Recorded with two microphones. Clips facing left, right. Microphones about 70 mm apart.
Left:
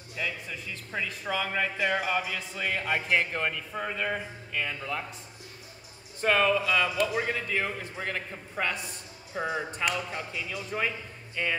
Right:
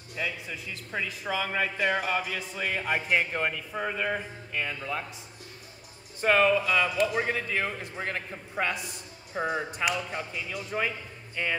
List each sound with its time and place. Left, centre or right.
0.1 s a man's voice: centre
6.2 s a man's voice: centre
9.3 s a man's voice: centre